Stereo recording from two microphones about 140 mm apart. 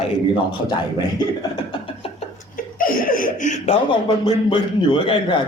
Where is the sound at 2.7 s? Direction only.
90° left.